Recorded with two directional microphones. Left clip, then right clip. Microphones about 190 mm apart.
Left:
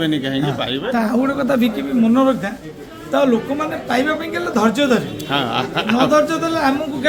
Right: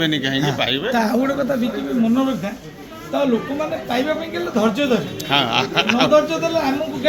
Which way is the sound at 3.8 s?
20° left (ahead or behind).